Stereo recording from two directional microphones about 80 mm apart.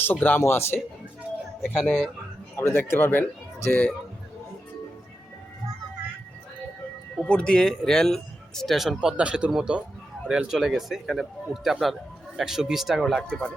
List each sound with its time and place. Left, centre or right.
0.0 s speech: left
1.6 s speech: centre
2.6 s a man's voice: left; by 3.9 s centre
7.2 s speech: centre
9.0 s a man's voice: centre